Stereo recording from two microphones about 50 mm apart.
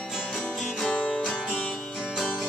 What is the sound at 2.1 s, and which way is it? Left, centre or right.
Music, centre.